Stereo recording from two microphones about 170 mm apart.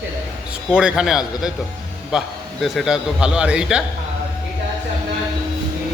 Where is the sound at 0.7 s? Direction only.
5° right (ahead or behind).